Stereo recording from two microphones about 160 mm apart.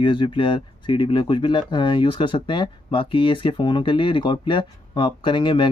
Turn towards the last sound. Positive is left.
turn(degrees=30)  # may be behind; listen again after turning